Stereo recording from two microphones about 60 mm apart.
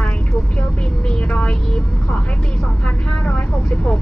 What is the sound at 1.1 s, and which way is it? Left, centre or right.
Speech, centre.